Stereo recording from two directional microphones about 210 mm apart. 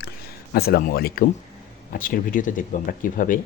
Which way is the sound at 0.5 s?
45° left (ahead or behind).